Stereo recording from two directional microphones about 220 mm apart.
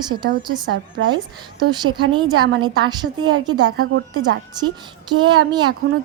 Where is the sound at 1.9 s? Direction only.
20° right (ahead or behind).